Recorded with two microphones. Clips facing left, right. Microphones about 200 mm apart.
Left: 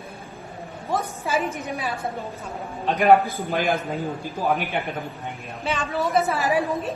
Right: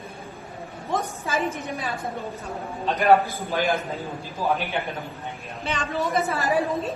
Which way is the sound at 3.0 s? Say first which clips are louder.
Left 2 dB; 55° left (ahead or behind).